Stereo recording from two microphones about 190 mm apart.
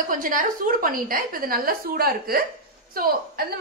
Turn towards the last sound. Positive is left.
turn(degrees=-50)  # may be behind; listen again after turning